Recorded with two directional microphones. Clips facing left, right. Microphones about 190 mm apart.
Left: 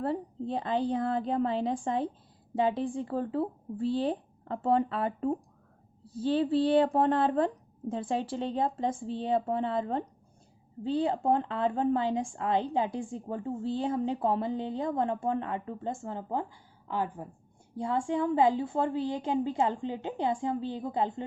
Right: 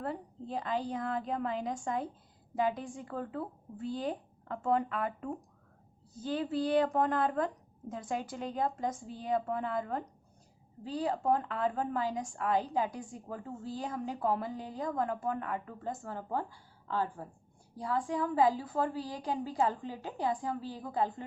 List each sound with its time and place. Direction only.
0.0 s a woman's voice: 30° left (ahead or behind)